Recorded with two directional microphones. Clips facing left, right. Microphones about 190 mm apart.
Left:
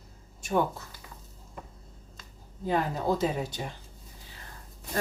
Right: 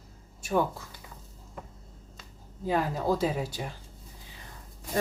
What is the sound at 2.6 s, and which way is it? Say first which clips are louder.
Speech: even; 5° right (ahead or behind).